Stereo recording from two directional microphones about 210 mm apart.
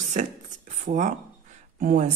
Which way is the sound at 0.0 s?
35° right (ahead or behind).